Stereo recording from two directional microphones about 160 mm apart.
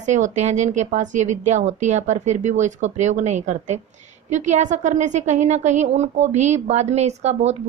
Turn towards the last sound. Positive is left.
turn(degrees=-45)  # may be behind; listen again after turning